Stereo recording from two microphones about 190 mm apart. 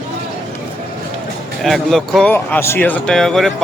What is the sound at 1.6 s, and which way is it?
Speech, centre (ahead or behind).